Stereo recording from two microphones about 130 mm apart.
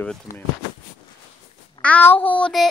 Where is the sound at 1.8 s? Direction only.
15° left (ahead or behind).